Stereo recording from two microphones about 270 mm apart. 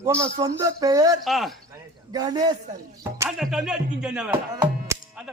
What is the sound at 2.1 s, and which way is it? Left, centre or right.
Speech, centre.